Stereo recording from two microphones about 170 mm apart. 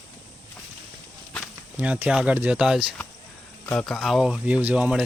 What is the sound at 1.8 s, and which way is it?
Speech, 10° right (ahead or behind).